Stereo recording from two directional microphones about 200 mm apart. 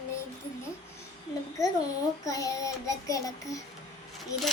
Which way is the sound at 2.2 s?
15° left (ahead or behind).